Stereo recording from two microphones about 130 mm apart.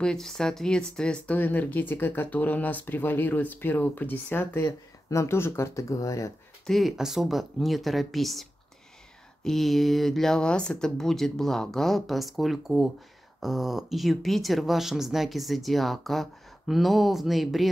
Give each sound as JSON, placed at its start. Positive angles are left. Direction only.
{"t": 0.0, "sound": "speech", "side_deg": 5}
{"t": 6.6, "sound": "speech", "side_deg": 0}